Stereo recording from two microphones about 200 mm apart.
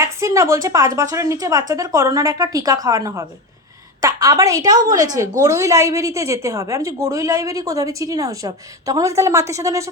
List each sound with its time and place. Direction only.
0.0 s a woman's voice: 15° right (ahead or behind)